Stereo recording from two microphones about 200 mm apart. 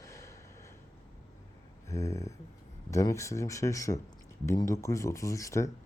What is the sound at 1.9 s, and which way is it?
Speech, 15° left (ahead or behind).